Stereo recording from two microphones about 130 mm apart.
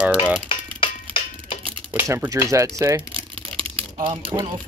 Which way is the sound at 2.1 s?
20° right (ahead or behind).